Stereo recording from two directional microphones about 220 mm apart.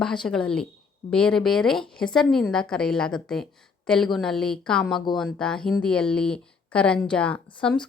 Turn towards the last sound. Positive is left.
turn(degrees=5)  # may be behind; listen again after turning